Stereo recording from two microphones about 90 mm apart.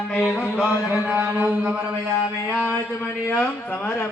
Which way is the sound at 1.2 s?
15° right (ahead or behind).